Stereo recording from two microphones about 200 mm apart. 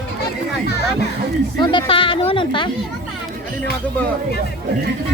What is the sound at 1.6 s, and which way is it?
Speech, 25° left (ahead or behind).